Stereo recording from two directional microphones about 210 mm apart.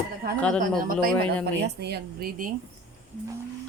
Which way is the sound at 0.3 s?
5° left (ahead or behind).